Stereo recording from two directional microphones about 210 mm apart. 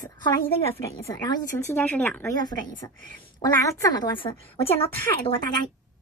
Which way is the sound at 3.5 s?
15° left (ahead or behind).